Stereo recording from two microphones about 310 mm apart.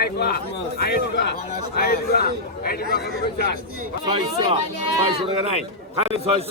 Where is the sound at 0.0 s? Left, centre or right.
Left.